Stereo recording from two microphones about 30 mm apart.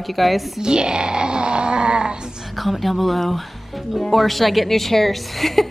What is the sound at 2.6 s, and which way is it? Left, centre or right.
A woman's voice, centre.